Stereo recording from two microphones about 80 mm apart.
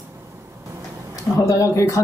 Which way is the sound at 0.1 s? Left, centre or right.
Right.